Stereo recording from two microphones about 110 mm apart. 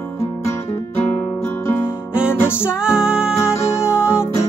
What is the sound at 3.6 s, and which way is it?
Music, 25° left (ahead or behind).